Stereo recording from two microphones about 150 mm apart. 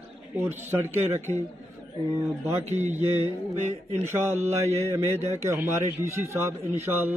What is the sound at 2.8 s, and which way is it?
Mantra, 50° right (ahead or behind).